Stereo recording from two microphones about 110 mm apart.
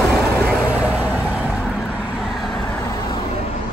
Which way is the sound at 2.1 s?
Centre (ahead or behind).